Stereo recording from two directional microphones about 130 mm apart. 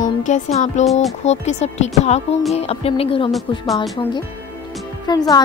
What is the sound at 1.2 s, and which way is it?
Speech, 60° left (ahead or behind).